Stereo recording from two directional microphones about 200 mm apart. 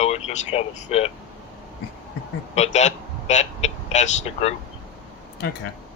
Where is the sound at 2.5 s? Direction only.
35° left (ahead or behind).